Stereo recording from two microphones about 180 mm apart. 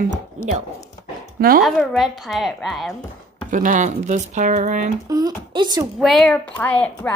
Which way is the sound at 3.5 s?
45° right (ahead or behind).